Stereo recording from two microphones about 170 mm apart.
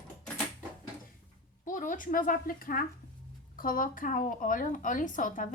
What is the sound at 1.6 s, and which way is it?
A woman's voice, 50° left (ahead or behind).